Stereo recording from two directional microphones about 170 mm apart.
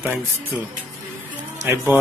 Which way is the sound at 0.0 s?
15° right (ahead or behind).